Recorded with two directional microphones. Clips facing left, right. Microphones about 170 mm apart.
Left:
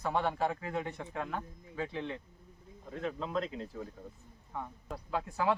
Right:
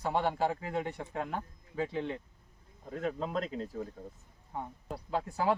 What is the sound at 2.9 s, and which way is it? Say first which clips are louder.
Speech: right 2 dB; 40° right (ahead or behind).